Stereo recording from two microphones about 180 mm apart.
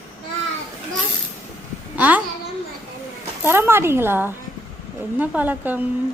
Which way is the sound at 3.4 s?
15° right (ahead or behind).